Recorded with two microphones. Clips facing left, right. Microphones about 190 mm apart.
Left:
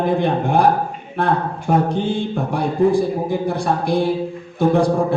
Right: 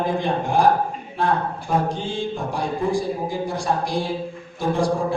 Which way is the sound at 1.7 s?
60° left (ahead or behind).